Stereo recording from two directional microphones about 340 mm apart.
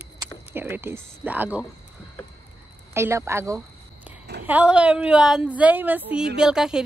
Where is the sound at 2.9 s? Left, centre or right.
Centre.